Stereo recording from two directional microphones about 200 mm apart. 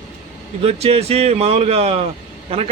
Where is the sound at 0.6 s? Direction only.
30° right (ahead or behind).